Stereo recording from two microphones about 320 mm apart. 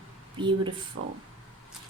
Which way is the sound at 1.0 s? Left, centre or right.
Right.